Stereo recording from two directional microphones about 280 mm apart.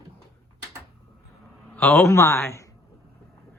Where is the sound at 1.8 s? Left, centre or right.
Centre.